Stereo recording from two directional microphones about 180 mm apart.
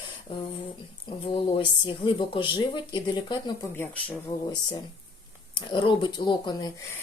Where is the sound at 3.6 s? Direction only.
10° left (ahead or behind).